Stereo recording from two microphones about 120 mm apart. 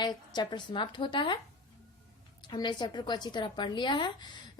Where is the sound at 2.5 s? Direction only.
40° left (ahead or behind).